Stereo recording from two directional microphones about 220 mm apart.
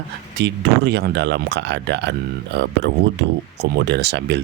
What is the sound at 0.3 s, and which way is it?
Speech, 50° right (ahead or behind).